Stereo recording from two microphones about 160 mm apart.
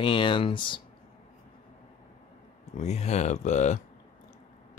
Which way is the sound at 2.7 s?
45° left (ahead or behind).